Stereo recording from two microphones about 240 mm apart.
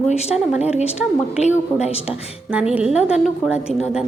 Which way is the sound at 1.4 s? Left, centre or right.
Left.